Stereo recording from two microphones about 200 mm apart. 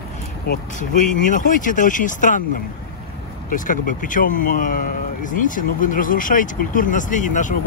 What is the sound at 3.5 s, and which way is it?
Speech, 40° left (ahead or behind).